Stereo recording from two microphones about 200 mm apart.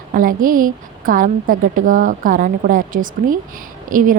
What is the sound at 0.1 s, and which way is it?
A woman's voice, 45° right (ahead or behind).